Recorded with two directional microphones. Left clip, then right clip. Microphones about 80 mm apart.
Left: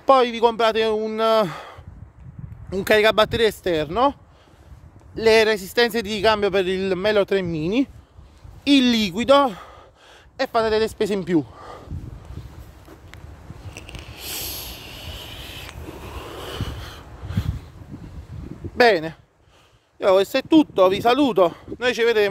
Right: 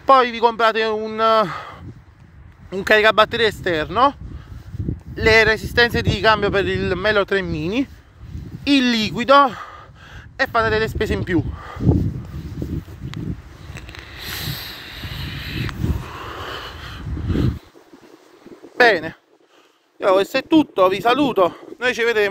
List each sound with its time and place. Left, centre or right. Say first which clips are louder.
0.0 s a man's voice: right 2 dB; left
2.8 s a man's voice: right 3 dB; left
8.6 s speech: even; centre
10.3 s a man's voice: right 2 dB; centre
13.7 s a sound: right 3 dB; right
14.2 s snort: right 3 dB; left
15.0 s vehicle: right 4 dB; left
18.8 s speech: right 2 dB; left
20.0 s speech: right 1 dB; centre
20.3 s a man's voice: right 1 dB; centre
21.5 s speech: right 1 dB; left